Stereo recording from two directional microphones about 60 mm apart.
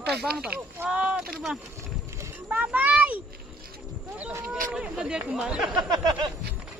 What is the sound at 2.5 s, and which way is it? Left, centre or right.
Speech, right.